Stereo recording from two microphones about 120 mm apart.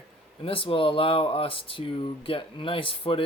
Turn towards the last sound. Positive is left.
turn(degrees=45)  # may be behind; listen again after turning